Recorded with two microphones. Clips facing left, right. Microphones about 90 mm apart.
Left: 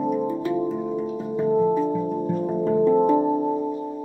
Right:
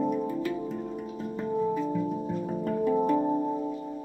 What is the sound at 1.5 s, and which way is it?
Music, 30° left (ahead or behind).